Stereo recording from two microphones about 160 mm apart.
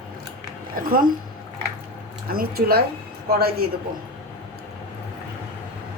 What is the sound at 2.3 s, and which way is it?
Speech, 70° right (ahead or behind).